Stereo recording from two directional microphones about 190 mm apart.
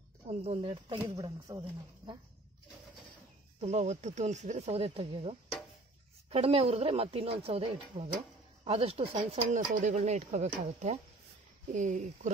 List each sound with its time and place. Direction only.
0.3 s speech: 30° right (ahead or behind)
3.6 s speech: 35° right (ahead or behind)